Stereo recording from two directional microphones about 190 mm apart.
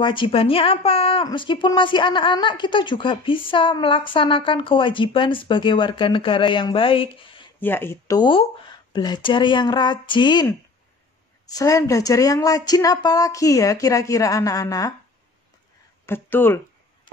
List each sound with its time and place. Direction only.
0.0 s speech: 25° left (ahead or behind)
7.6 s speech: 10° left (ahead or behind)
16.1 s speech: 10° left (ahead or behind)